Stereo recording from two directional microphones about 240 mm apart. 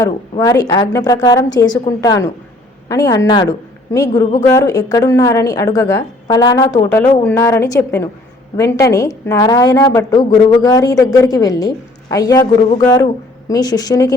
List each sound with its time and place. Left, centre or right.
0.0 s a woman's voice: centre